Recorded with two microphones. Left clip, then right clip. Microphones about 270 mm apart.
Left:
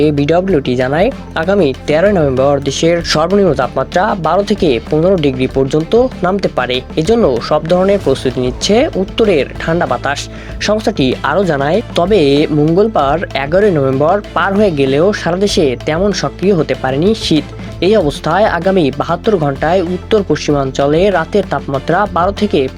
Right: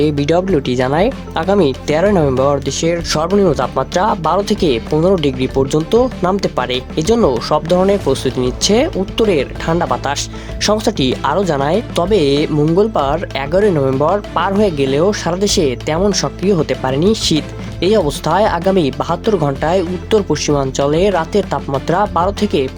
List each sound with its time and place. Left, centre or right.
0.0 s speech: centre